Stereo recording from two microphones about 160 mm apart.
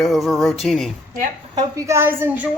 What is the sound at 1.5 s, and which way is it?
Speech, 15° right (ahead or behind).